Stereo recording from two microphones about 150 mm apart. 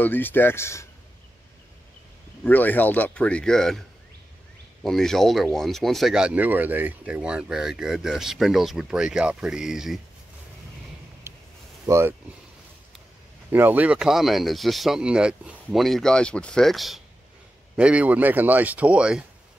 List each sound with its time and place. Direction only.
0.0 s speech: 15° left (ahead or behind)
2.4 s speech: 10° left (ahead or behind)
4.8 s speech: 5° left (ahead or behind)
11.3 s a sound: 15° right (ahead or behind)
11.8 s speech: 20° right (ahead or behind)
13.5 s speech: 10° right (ahead or behind)